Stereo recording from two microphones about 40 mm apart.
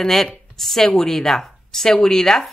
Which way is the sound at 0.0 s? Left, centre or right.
Centre.